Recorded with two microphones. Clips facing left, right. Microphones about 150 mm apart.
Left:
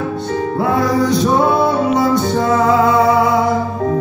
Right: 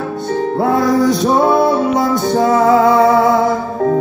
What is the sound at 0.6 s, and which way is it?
Music, 45° right (ahead or behind).